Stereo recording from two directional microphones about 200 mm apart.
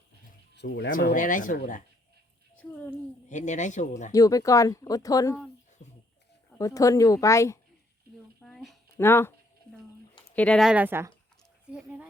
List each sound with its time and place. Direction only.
0.5 s speech: 60° left (ahead or behind)
0.9 s speech: 40° left (ahead or behind)
3.2 s speech: 40° left (ahead or behind)
4.1 s speech: 15° left (ahead or behind)
6.6 s speech: 15° left (ahead or behind)
8.4 s a sound: centre (ahead or behind)
9.0 s speech: 10° left (ahead or behind)
10.3 s speech: 5° left (ahead or behind)